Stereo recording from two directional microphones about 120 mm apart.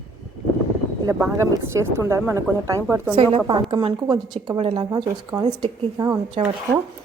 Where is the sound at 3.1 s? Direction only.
45° right (ahead or behind); by 6.2 s 30° right (ahead or behind).